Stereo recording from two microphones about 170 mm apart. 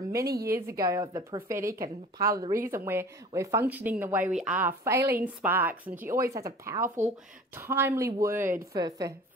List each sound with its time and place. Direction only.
0.0 s a woman's voice: 20° right (ahead or behind)